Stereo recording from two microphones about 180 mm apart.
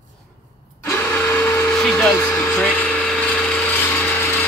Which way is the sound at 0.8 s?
10° left (ahead or behind).